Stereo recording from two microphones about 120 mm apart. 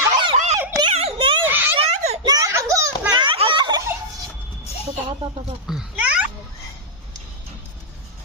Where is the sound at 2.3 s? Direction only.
30° right (ahead or behind).